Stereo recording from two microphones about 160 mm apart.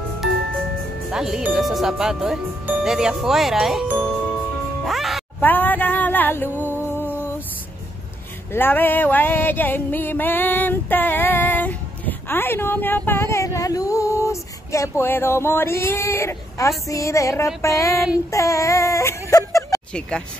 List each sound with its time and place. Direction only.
1.1 s speech: 5° right (ahead or behind)
4.8 s music: centre (ahead or behind)
5.4 s a sound: 10° left (ahead or behind)
8.5 s a sound: 15° left (ahead or behind)
17.6 s child singing: 20° left (ahead or behind)
19.9 s speech: 5° left (ahead or behind)